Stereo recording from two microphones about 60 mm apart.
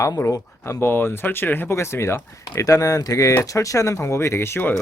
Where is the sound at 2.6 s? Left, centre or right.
Left.